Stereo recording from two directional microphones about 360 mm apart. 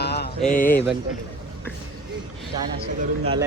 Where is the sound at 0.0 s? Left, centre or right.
Left.